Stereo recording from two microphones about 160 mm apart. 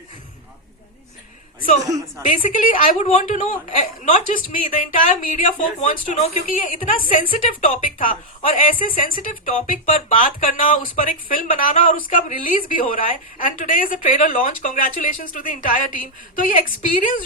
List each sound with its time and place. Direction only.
1.9 s a woman's voice: 20° right (ahead or behind)
2.2 s speech: 55° left (ahead or behind)
7.0 s a woman's voice: 60° left (ahead or behind)